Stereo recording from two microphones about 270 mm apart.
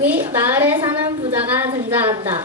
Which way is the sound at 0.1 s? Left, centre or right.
Centre.